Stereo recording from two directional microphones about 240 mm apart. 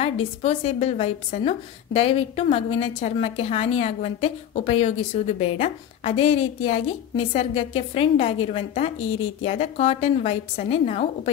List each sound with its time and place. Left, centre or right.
0.0 s a woman's voice: left
9.0 s a woman's voice: left
9.4 s a woman's voice: left